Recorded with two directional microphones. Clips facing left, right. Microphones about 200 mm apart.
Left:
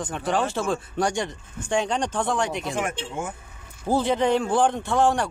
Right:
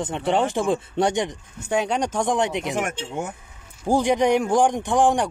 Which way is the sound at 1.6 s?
10° right (ahead or behind).